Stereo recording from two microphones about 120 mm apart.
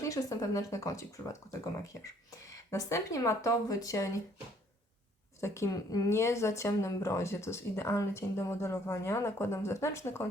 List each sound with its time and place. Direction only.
0.0 s speech: 25° left (ahead or behind)
2.4 s speech: 25° left (ahead or behind)
5.4 s speech: 25° left (ahead or behind)